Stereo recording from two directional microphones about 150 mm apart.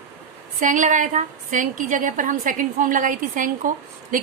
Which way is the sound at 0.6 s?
55° right (ahead or behind).